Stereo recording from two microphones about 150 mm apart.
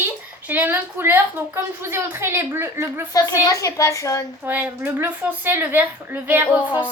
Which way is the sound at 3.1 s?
25° left (ahead or behind).